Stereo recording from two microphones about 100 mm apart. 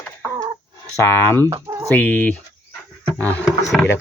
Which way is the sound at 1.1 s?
25° left (ahead or behind).